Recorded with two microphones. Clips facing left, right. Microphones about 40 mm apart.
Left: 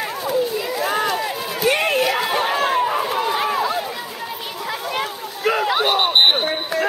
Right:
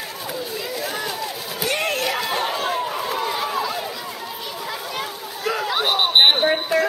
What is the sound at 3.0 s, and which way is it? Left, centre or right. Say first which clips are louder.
Run: left 4 dB; centre.